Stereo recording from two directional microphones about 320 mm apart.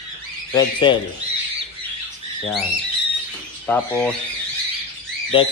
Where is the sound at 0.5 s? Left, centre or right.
Centre.